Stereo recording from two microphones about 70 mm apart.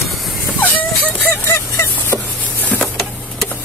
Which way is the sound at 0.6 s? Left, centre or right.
Left.